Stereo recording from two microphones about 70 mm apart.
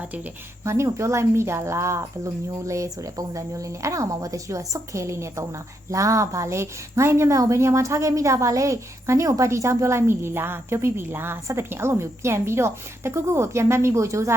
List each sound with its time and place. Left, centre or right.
0.6 s a woman's voice: right